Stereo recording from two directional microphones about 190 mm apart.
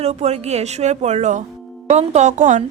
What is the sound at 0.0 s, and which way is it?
A woman's voice, 35° right (ahead or behind).